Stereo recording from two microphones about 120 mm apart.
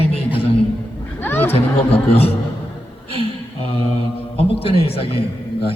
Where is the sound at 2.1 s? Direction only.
55° left (ahead or behind).